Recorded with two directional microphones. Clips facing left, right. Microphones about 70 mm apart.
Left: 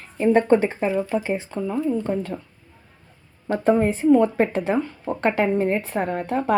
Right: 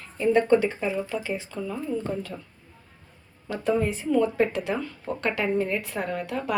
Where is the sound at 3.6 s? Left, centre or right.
Left.